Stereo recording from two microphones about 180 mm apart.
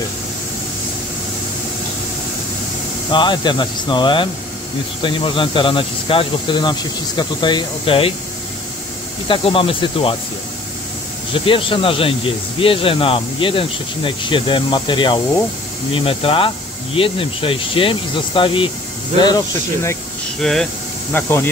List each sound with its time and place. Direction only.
3.1 s speech: 25° left (ahead or behind)
9.3 s speech: 30° left (ahead or behind)
11.3 s speech: 30° left (ahead or behind)
20.3 s speech: centre (ahead or behind)
21.1 s speech: 15° left (ahead or behind)